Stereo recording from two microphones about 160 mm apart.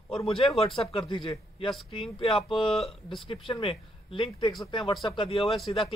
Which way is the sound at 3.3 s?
35° left (ahead or behind).